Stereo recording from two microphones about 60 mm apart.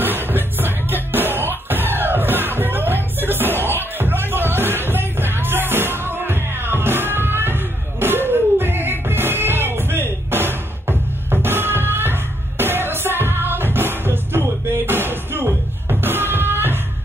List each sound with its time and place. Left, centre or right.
0.0 s music: right